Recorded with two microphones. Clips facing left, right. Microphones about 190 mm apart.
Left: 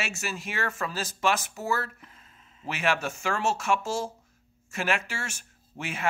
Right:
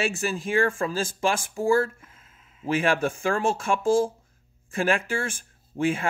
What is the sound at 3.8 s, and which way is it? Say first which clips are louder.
Speech: right 10 dB; 50° right (ahead or behind).